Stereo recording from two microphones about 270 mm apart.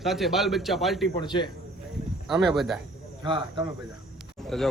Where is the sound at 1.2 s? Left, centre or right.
Centre.